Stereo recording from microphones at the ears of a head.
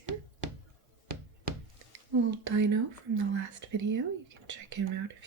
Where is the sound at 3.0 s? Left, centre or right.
Right.